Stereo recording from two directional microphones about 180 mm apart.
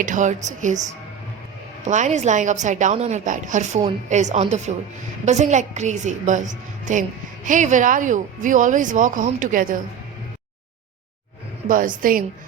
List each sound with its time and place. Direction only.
0.0 s speech: 45° right (ahead or behind)
1.9 s a woman's voice: 40° right (ahead or behind)
11.7 s speech: 50° right (ahead or behind)